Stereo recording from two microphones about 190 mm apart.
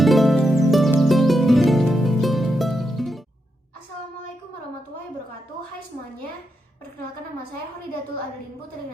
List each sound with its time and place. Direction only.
0.0 s music: centre (ahead or behind)